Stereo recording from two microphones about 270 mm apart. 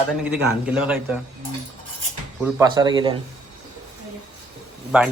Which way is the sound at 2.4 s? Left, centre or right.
Centre.